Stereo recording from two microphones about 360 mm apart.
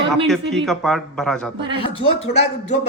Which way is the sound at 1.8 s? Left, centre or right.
Centre.